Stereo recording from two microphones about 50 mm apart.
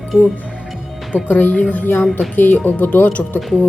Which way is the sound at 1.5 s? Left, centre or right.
Left.